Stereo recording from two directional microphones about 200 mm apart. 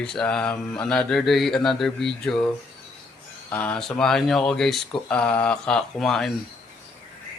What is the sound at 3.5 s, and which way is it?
Mantra, 5° left (ahead or behind).